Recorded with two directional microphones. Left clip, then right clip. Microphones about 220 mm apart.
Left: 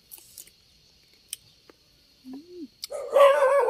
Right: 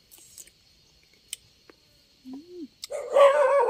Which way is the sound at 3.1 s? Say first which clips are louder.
Even; 45° left (ahead or behind).